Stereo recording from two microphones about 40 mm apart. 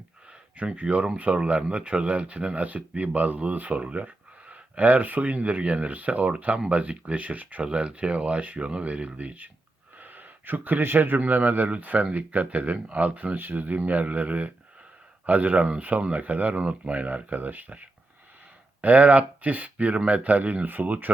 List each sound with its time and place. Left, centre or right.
0.8 s speech: right
7.6 s speech: right
11.2 s speech: right
13.3 s speech: right